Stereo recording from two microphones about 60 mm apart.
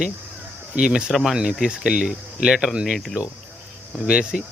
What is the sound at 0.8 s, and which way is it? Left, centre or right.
Speech, centre.